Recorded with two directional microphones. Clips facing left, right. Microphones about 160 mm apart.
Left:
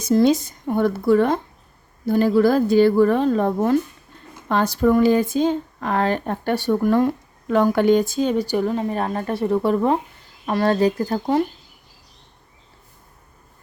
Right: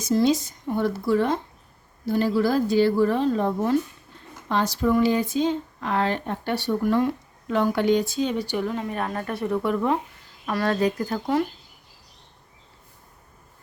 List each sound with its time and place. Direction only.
0.0 s speech: 55° left (ahead or behind); by 11.4 s 30° left (ahead or behind)